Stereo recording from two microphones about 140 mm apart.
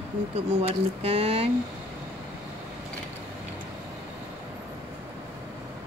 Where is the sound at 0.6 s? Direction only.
45° right (ahead or behind).